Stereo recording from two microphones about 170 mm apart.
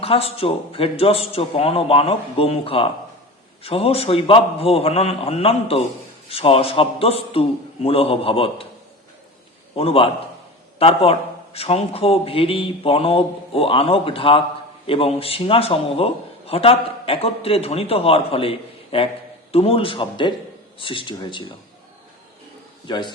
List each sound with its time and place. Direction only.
0.0 s a man's voice: 35° left (ahead or behind)
9.7 s a man's voice: 35° left (ahead or behind)
22.9 s speech: 25° left (ahead or behind)